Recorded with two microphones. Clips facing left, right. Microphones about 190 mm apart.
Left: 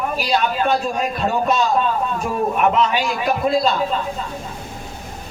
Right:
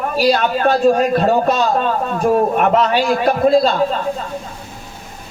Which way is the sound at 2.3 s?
40° right (ahead or behind).